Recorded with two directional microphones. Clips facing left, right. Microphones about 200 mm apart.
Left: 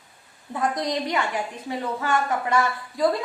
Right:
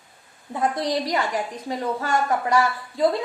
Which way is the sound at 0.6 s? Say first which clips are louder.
Right 2 dB; 30° right (ahead or behind).